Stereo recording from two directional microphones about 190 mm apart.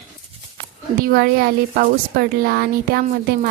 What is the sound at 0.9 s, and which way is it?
A woman's voice, 55° right (ahead or behind).